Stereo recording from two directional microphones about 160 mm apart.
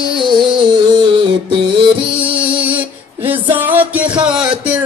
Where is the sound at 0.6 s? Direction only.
25° right (ahead or behind).